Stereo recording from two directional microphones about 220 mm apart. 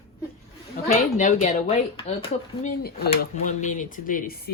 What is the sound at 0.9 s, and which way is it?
Speech, 35° left (ahead or behind).